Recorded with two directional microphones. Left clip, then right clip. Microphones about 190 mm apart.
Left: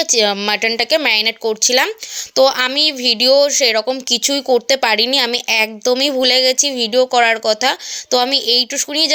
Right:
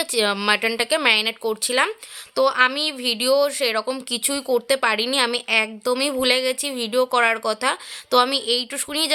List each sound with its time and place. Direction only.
0.0 s speech: 10° left (ahead or behind)